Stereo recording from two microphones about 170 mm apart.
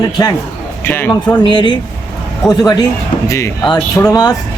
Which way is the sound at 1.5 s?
25° left (ahead or behind).